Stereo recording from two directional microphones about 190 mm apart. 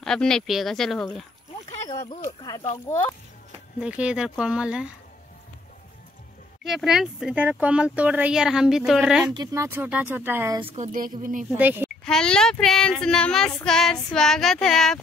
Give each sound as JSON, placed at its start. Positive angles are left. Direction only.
{"t": 0.0, "sound": "child singing", "side_deg": 5}
{"t": 1.9, "sound": "speech", "side_deg": 15}
{"t": 3.8, "sound": "child singing", "side_deg": -5}
{"t": 6.6, "sound": "child singing", "side_deg": 0}
{"t": 9.3, "sound": "speech", "side_deg": -20}
{"t": 10.7, "sound": "a woman's voice", "side_deg": -40}
{"t": 11.5, "sound": "speech", "side_deg": -10}
{"t": 12.0, "sound": "child singing", "side_deg": 5}